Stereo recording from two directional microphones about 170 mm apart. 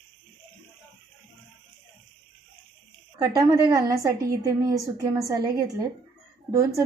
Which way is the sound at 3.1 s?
25° right (ahead or behind).